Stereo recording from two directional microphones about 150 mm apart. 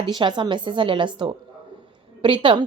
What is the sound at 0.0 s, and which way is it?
Speech, 30° right (ahead or behind).